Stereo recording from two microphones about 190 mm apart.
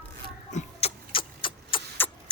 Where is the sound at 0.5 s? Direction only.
30° left (ahead or behind).